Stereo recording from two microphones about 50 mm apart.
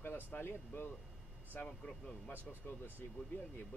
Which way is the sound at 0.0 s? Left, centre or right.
Left.